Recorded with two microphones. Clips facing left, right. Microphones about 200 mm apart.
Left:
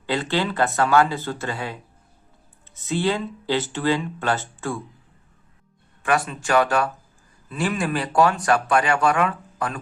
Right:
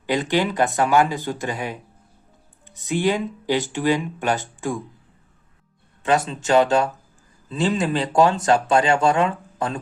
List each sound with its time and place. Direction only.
0.0 s speech: 15° right (ahead or behind)
6.0 s speech: 20° right (ahead or behind)